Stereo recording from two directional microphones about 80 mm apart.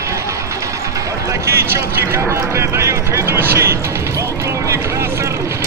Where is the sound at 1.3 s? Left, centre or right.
Right.